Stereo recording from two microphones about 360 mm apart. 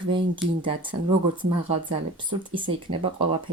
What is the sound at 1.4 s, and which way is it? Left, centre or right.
Speech, centre.